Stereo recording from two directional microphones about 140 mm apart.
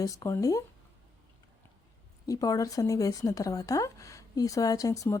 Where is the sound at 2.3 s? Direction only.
25° left (ahead or behind).